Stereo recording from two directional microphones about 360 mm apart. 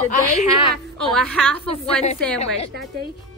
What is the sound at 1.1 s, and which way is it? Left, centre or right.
Speech, centre.